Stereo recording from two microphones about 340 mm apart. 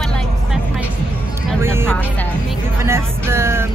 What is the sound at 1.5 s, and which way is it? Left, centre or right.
Speech, centre.